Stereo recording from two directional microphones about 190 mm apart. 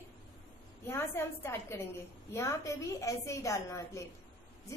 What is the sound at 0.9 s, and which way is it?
A woman's voice, 10° left (ahead or behind).